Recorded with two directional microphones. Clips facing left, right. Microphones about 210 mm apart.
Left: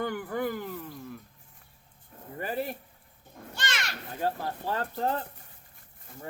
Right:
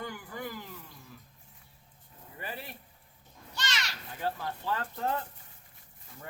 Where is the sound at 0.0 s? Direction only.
60° left (ahead or behind).